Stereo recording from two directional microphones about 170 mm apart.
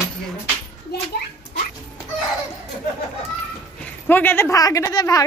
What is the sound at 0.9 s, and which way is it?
Speech, 75° left (ahead or behind).